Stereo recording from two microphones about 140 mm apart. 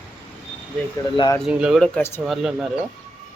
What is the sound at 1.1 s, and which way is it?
Speech, 35° left (ahead or behind).